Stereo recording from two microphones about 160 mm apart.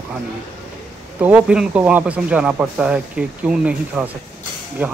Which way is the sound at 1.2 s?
10° right (ahead or behind).